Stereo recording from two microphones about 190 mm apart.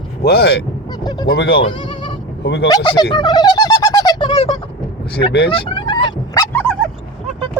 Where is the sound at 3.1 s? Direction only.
25° left (ahead or behind).